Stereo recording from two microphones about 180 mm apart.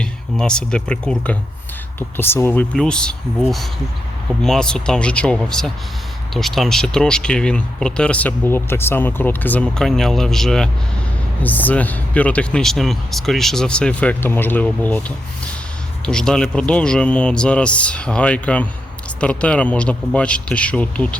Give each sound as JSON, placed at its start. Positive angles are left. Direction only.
{"t": 0.0, "sound": "speech", "side_deg": 5}